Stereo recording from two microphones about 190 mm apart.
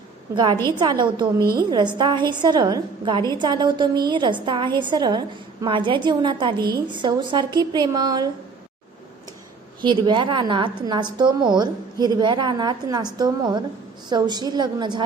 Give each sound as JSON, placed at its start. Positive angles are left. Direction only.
{"t": 0.3, "sound": "a woman's voice", "side_deg": -25}
{"t": 9.8, "sound": "a woman's voice", "side_deg": -25}